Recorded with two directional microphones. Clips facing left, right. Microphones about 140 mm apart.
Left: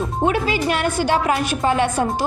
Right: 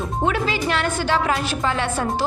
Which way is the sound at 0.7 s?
10° left (ahead or behind).